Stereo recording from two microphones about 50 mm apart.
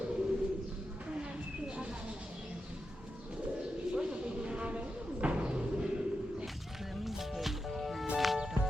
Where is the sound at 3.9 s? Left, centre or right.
Centre.